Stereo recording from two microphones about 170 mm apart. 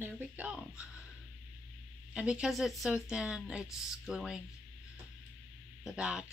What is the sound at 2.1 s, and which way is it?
Speech, 5° right (ahead or behind).